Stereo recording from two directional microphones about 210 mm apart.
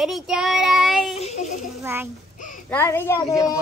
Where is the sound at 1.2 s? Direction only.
30° left (ahead or behind).